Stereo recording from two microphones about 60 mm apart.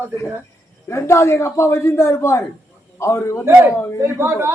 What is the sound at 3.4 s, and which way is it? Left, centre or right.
A man's voice, right.